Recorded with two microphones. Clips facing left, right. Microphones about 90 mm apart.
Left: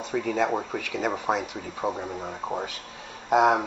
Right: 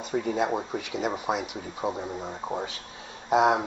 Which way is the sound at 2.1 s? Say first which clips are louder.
Left 1 dB; 10° left (ahead or behind).